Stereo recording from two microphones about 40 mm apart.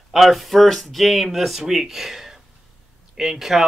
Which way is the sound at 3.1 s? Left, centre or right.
Centre.